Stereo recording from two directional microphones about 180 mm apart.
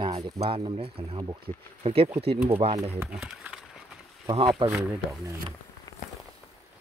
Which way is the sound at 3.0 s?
5° right (ahead or behind).